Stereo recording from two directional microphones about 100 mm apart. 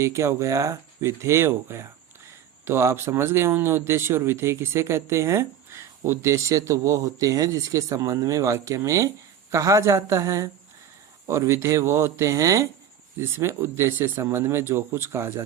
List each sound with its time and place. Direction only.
0.0 s speech: 30° right (ahead or behind)